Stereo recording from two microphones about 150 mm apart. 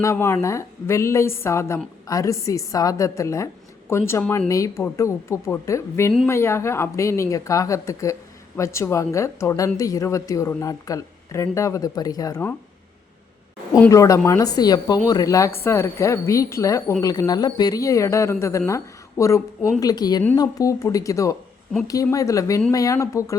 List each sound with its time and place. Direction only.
0.0 s a woman's voice: 20° left (ahead or behind)
13.9 s a woman's voice: 20° left (ahead or behind)